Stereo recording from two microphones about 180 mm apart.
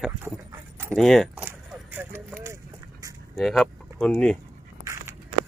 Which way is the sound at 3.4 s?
Centre (ahead or behind).